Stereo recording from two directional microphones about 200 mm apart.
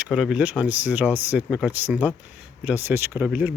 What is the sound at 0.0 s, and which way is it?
Speech, 5° right (ahead or behind).